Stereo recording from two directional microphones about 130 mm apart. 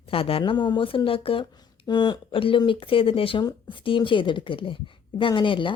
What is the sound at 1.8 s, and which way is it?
Speech, 35° left (ahead or behind).